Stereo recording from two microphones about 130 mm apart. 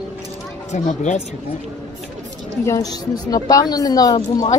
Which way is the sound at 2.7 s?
30° left (ahead or behind).